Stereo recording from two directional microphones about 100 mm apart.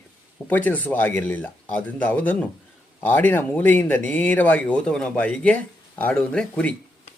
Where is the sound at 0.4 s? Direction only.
15° left (ahead or behind).